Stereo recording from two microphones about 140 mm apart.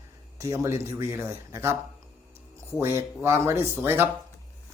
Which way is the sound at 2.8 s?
15° right (ahead or behind).